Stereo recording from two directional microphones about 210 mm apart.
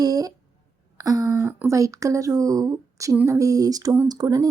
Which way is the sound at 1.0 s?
15° right (ahead or behind).